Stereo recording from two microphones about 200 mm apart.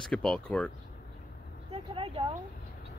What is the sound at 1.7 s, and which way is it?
Vehicle, 25° right (ahead or behind).